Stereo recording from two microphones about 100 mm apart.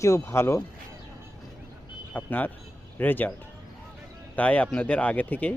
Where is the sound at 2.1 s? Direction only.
15° left (ahead or behind).